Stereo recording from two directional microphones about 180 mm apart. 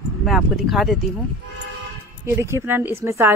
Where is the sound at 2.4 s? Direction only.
15° right (ahead or behind).